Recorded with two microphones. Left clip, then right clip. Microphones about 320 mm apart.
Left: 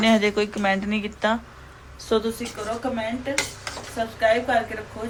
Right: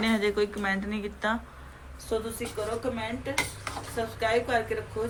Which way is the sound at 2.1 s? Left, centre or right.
Left.